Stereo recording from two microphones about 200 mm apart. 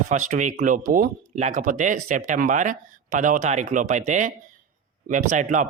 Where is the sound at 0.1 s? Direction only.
40° right (ahead or behind).